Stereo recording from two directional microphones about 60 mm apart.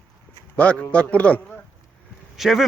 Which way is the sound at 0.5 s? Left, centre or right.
Left.